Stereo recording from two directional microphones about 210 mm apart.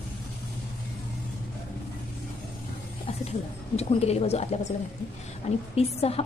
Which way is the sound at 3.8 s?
30° left (ahead or behind).